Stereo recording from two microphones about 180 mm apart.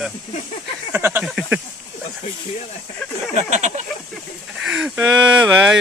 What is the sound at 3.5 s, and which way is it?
Speech, 40° right (ahead or behind).